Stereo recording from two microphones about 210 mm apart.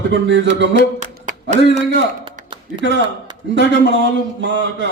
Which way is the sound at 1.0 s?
35° right (ahead or behind).